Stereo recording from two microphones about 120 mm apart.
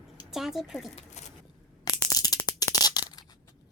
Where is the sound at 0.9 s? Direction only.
75° left (ahead or behind).